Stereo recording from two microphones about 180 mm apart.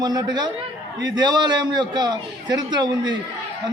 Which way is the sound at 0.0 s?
20° right (ahead or behind).